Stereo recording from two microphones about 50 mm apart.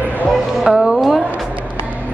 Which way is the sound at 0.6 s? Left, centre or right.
Centre.